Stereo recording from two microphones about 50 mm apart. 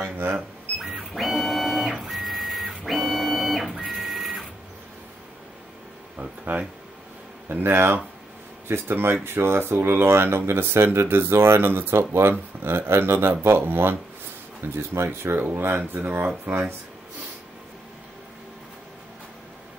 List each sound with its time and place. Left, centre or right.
0.0 s cash register: right
0.7 s printer: centre
6.1 s a sound: right
7.4 s speech: right